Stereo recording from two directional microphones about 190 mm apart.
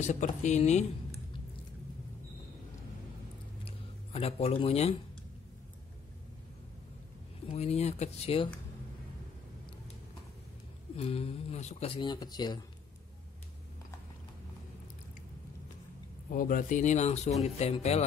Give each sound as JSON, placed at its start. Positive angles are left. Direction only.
{"t": 0.0, "sound": "speech", "side_deg": 40}
{"t": 3.6, "sound": "a sound", "side_deg": 30}
{"t": 7.5, "sound": "speech", "side_deg": 35}
{"t": 11.0, "sound": "speech", "side_deg": 30}
{"t": 16.3, "sound": "speech", "side_deg": 45}